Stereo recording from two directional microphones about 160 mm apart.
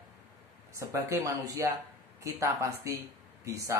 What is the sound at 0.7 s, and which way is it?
Speech, 20° right (ahead or behind).